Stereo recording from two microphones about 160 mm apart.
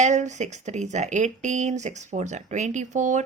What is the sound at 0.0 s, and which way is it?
Speech, 50° right (ahead or behind).